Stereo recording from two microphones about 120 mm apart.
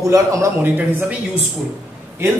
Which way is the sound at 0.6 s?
15° right (ahead or behind).